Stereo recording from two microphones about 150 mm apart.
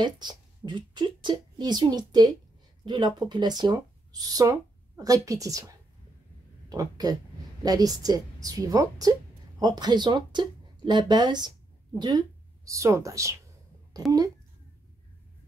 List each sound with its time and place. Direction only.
0.0 s a woman's voice: 30° right (ahead or behind)